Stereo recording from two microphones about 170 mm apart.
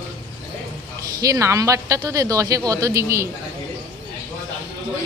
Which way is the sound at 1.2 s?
20° right (ahead or behind).